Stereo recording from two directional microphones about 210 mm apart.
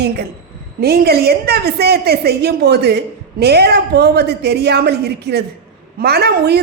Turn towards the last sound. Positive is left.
turn(degrees=-50)  # may be behind; listen again after turning